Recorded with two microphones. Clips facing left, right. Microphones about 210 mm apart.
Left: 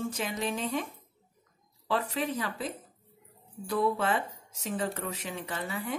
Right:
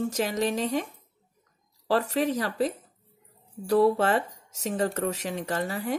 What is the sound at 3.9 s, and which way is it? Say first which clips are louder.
Speech: right 5 dB; 40° right (ahead or behind).